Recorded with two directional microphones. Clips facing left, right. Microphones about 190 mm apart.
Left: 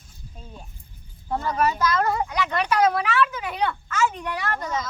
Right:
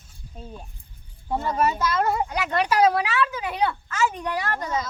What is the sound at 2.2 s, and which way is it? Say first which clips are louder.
Speech: right 1 dB; 30° right (ahead or behind).